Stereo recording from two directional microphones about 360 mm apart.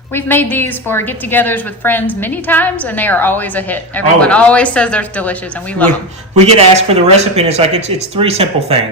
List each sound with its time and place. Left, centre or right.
0.1 s a woman's voice: centre
6.4 s speech: centre